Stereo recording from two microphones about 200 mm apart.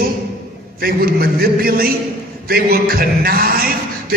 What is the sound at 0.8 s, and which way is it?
Speech, 50° right (ahead or behind).